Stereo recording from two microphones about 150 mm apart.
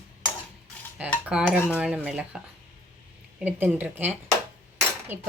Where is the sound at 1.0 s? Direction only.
10° right (ahead or behind).